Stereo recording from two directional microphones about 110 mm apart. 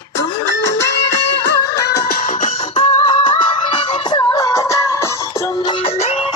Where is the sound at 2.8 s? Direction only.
50° left (ahead or behind).